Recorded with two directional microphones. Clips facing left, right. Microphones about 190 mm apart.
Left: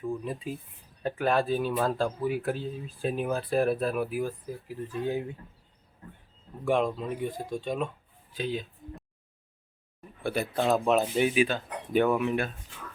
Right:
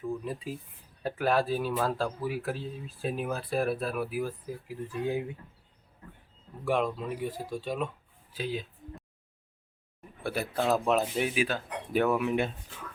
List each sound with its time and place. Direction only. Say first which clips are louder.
0.3 s speech: left 1 dB; centre (ahead or behind)
6.7 s speech: left 2 dB; 5° right (ahead or behind)
8.3 s a sound: left 2 dB; 5° right (ahead or behind)
10.2 s speech: left 2 dB; 5° right (ahead or behind)
12.3 s speech: right 1 dB; 20° right (ahead or behind)